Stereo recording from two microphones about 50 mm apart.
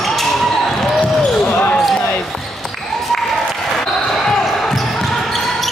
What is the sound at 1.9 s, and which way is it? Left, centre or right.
Basketball bounce, left.